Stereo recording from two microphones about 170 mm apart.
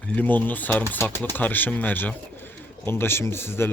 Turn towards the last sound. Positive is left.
turn(degrees=15)  # may be behind; listen again after turning